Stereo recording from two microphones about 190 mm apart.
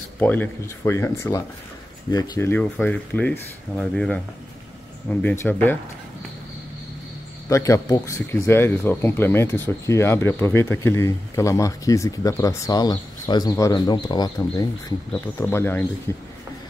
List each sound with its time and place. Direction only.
0.2 s speech: 10° left (ahead or behind)
5.2 s speech: 10° left (ahead or behind)
7.4 s speech: 15° left (ahead or behind)